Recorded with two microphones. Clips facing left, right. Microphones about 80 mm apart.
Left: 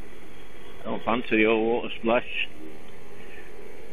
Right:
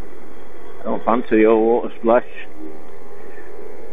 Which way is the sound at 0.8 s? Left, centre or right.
Right.